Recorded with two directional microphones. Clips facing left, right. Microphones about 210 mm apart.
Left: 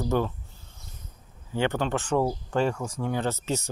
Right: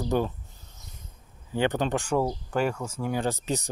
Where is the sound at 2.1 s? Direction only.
5° right (ahead or behind).